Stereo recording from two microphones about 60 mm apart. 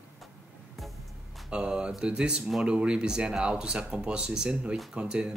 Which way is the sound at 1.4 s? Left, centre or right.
Centre.